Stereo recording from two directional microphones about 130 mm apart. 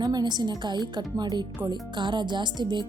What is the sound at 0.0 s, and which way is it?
A woman's voice, 30° right (ahead or behind).